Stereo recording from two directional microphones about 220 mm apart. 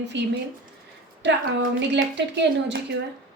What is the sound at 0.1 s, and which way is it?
A woman's voice, 55° right (ahead or behind).